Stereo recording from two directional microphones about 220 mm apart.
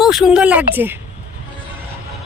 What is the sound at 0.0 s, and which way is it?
Speech, centre (ahead or behind).